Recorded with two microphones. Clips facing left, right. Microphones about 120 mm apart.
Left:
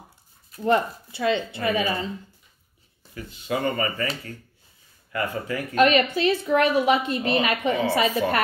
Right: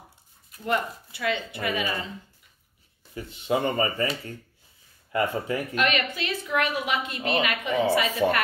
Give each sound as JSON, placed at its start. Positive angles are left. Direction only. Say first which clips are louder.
{"t": 0.7, "sound": "speech", "louder": "left 6 dB", "side_deg": 30}
{"t": 3.2, "sound": "speech", "louder": "right 2 dB", "side_deg": -25}
{"t": 5.1, "sound": "speech", "louder": "right 2 dB", "side_deg": -25}
{"t": 5.8, "sound": "a woman's voice", "louder": "left 10 dB", "side_deg": 35}